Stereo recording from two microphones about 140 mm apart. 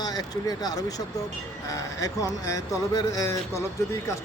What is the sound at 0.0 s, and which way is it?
Speech, 30° left (ahead or behind).